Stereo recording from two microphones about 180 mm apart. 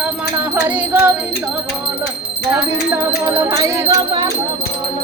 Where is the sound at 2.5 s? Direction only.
10° right (ahead or behind).